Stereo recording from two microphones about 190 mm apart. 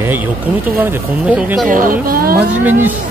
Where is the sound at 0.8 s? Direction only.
10° right (ahead or behind).